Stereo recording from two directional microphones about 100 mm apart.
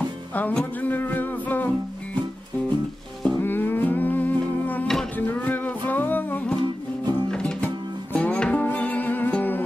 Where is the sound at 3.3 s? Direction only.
20° left (ahead or behind).